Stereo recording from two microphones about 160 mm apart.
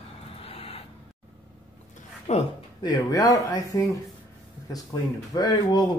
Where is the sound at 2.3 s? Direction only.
45° left (ahead or behind).